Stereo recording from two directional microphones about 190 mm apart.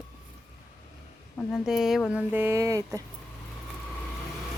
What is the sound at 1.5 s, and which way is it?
Speech, centre (ahead or behind).